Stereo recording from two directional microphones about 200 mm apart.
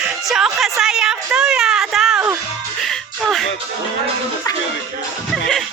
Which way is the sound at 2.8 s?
Centre (ahead or behind).